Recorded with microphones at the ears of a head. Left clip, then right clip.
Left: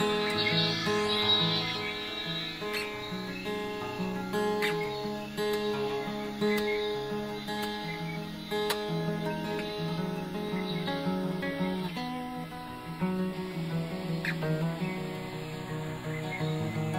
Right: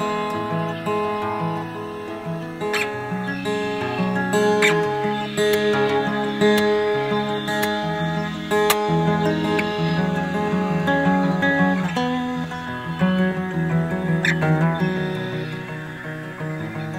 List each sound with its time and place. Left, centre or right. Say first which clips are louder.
4.0 s music: right 12 dB; right